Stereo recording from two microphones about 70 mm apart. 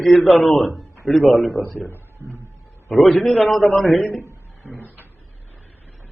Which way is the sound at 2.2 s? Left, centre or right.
Right.